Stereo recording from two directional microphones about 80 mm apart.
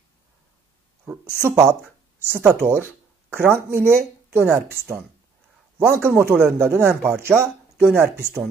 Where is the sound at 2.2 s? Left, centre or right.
Right.